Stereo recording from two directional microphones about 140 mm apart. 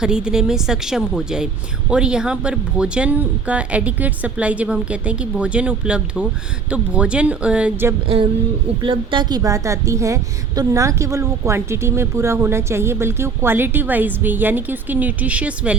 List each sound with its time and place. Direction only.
0.0 s a woman's voice: 5° right (ahead or behind)
8.0 s a woman's voice: 40° right (ahead or behind); by 15.8 s 10° right (ahead or behind)